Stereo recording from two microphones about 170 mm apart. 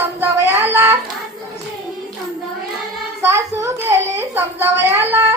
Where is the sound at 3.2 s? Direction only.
15° right (ahead or behind).